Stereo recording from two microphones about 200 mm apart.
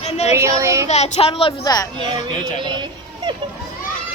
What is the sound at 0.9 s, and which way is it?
Speech, 35° left (ahead or behind).